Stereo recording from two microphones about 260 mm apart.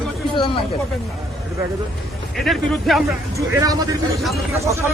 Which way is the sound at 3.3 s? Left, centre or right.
Centre.